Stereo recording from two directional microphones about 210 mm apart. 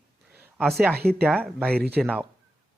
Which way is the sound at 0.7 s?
5° right (ahead or behind).